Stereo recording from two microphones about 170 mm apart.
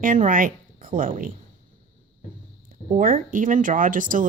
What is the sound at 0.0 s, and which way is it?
Speech, 50° right (ahead or behind).